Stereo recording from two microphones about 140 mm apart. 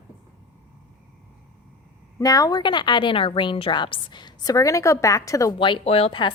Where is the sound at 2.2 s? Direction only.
25° left (ahead or behind).